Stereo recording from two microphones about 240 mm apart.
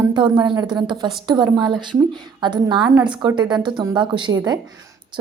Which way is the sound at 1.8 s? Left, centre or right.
Centre.